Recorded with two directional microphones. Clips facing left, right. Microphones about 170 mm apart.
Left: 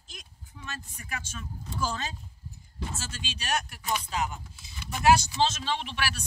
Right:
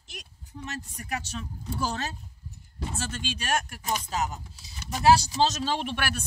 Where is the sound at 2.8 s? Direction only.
55° right (ahead or behind).